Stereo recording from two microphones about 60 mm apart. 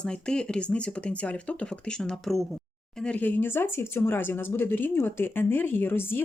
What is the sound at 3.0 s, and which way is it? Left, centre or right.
Speech, left.